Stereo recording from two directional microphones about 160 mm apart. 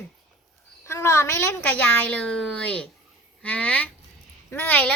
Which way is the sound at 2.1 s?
5° left (ahead or behind).